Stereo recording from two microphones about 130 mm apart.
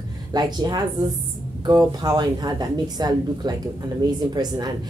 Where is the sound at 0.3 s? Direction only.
30° right (ahead or behind).